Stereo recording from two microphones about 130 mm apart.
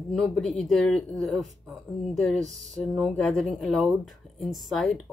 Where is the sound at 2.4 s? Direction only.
65° right (ahead or behind).